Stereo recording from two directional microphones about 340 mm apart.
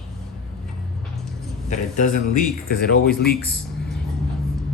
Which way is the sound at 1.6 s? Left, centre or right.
Left.